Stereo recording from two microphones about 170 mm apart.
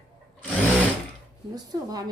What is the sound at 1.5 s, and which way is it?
Speech, 20° right (ahead or behind).